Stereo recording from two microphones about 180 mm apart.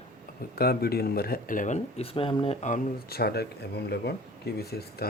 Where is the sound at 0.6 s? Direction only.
60° left (ahead or behind); by 2.8 s 40° left (ahead or behind).